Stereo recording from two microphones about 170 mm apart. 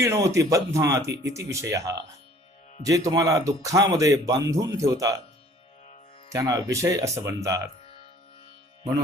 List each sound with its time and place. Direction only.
0.0 s speech: 15° right (ahead or behind)
6.2 s speech: 20° right (ahead or behind)